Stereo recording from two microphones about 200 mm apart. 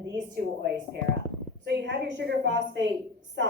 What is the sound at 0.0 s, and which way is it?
A woman's voice, 55° right (ahead or behind).